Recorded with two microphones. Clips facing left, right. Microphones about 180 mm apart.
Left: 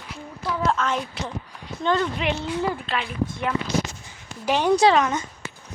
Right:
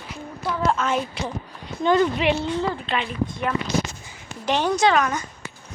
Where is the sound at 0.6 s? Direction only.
5° right (ahead or behind).